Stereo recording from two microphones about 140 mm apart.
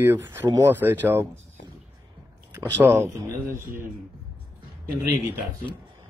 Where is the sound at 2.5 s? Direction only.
20° right (ahead or behind).